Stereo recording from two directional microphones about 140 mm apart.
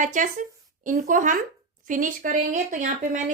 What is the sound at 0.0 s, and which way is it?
A woman's voice, 65° right (ahead or behind).